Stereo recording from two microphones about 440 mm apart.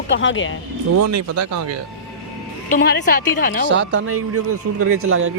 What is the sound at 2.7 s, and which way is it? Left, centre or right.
Speech, left.